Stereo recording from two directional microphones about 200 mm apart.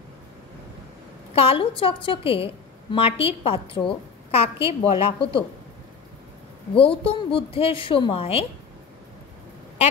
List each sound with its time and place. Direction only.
1.3 s a woman's voice: 30° left (ahead or behind)
6.7 s a woman's voice: 25° left (ahead or behind)